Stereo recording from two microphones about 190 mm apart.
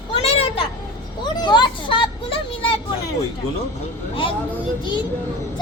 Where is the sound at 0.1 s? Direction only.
30° left (ahead or behind).